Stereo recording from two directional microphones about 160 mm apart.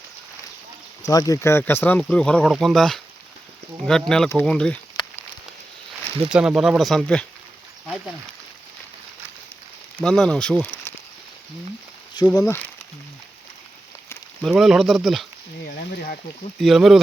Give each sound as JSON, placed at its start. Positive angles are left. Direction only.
{"t": 1.0, "sound": "speech", "side_deg": 20}
{"t": 6.2, "sound": "speech", "side_deg": -5}
{"t": 10.0, "sound": "speech", "side_deg": 5}
{"t": 12.3, "sound": "speech", "side_deg": 25}
{"t": 14.4, "sound": "speech", "side_deg": 0}
{"t": 16.6, "sound": "speech", "side_deg": 0}